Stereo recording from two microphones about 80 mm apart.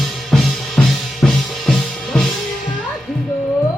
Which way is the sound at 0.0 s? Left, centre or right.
Centre.